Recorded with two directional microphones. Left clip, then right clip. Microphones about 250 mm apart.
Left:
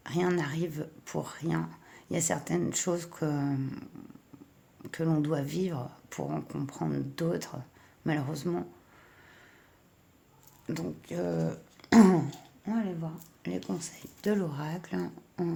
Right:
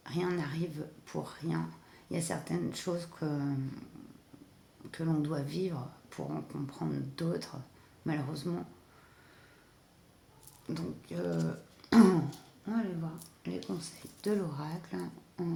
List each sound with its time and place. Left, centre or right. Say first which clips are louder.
0.0 s speech: left 5 dB; left
10.7 s speech: left 4 dB; left
13.7 s speech: left 3 dB; left